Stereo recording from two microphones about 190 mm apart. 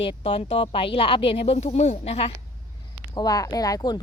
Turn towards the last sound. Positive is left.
turn(degrees=20)  # may be behind; listen again after turning